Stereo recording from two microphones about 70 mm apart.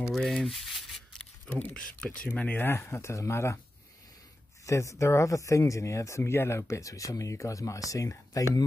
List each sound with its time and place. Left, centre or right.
0.1 s rub: centre
1.6 s speech: centre
2.2 s speech: left
2.8 s speech: left
4.6 s speech: left